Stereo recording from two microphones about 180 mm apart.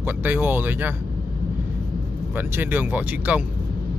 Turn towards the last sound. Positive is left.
turn(degrees=-10)  # may be behind; listen again after turning